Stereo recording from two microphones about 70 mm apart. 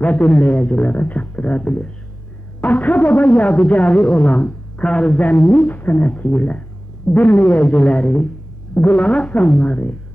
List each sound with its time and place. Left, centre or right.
0.0 s speech: left